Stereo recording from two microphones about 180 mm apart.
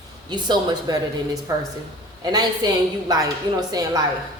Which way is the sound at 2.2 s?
20° right (ahead or behind).